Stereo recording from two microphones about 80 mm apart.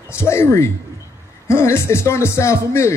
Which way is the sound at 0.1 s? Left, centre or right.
Left.